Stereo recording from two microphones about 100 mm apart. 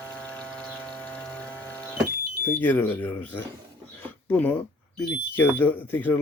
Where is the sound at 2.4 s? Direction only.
20° left (ahead or behind).